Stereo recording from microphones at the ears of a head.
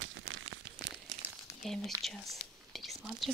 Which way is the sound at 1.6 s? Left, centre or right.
Centre.